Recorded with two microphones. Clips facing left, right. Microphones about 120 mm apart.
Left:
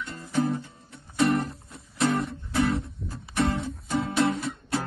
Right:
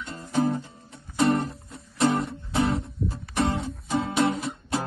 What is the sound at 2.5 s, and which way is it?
Guitar, 25° right (ahead or behind).